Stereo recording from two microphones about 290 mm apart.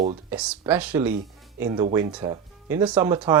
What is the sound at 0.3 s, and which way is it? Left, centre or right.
Speech, centre.